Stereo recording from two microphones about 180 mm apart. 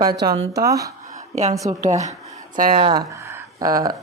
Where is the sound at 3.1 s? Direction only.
15° right (ahead or behind).